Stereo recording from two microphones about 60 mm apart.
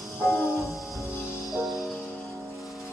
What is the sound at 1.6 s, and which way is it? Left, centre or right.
Music, centre.